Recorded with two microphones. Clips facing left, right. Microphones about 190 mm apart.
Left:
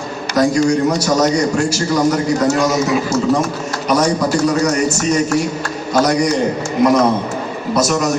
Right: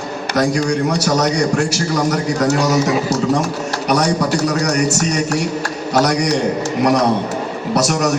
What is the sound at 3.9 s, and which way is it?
A man's voice, 70° right (ahead or behind).